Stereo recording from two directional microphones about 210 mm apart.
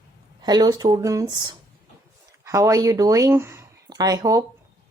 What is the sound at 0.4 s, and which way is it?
Speech, 20° right (ahead or behind).